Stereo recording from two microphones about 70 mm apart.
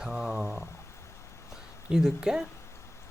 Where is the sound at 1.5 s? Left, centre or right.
Centre.